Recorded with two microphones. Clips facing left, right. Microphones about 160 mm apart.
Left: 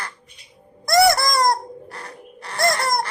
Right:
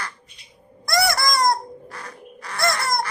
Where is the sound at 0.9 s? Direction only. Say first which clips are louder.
Left 5 dB; 25° left (ahead or behind).